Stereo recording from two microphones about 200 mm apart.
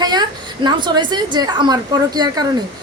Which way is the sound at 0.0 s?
20° right (ahead or behind).